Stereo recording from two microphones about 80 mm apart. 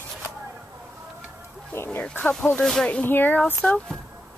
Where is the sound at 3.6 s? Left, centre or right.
Centre.